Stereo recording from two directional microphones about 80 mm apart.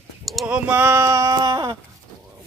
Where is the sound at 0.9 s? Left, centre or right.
Right.